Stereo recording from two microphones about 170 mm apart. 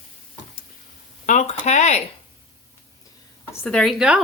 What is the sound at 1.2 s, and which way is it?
Speech, 45° left (ahead or behind).